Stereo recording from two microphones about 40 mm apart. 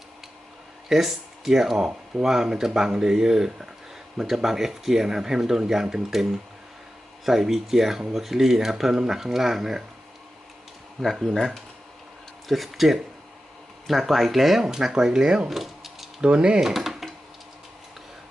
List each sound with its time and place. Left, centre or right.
0.9 s speech: centre
7.3 s speech: centre
11.0 s speech: centre
12.5 s speech: centre
14.1 s speech: centre
15.4 s mechanisms: centre
16.2 s speech: right
16.6 s a sound: centre